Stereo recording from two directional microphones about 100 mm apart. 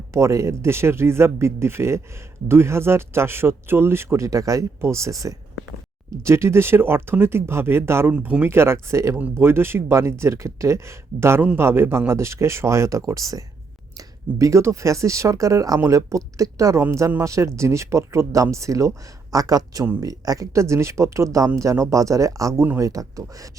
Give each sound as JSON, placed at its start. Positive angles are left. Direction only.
{"t": 0.1, "sound": "speech", "side_deg": -30}
{"t": 8.1, "sound": "speech", "side_deg": -15}